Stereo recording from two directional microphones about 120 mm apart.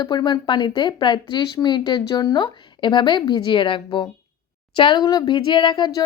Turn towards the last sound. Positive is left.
turn(degrees=40)  # may be behind; listen again after turning